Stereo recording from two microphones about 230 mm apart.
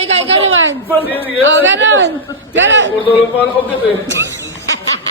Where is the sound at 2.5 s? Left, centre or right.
Right.